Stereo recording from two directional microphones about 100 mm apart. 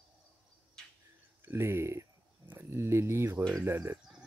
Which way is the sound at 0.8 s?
5° left (ahead or behind).